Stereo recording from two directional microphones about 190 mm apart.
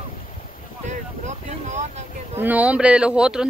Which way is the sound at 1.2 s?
40° right (ahead or behind).